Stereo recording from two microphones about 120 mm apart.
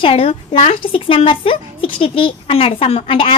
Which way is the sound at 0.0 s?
50° left (ahead or behind).